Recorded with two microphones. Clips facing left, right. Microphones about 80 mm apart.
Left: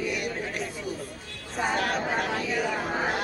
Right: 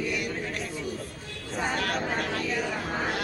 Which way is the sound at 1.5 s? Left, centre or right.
Centre.